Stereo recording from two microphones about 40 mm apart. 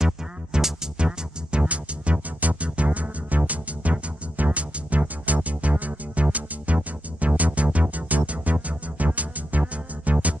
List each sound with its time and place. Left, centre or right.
0.0 s music: centre
0.9 s music: right